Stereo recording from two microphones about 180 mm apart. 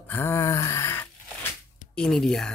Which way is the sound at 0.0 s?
10° left (ahead or behind).